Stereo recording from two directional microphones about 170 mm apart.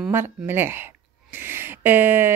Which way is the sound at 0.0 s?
15° right (ahead or behind).